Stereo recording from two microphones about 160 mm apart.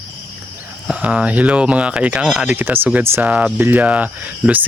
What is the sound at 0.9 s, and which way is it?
Speech, 10° right (ahead or behind).